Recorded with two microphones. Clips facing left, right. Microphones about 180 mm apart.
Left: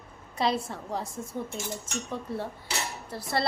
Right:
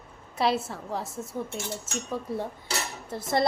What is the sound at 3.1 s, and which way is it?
Dishes, 20° right (ahead or behind).